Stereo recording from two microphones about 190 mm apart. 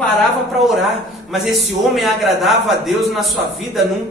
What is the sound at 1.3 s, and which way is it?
A man's voice, centre (ahead or behind).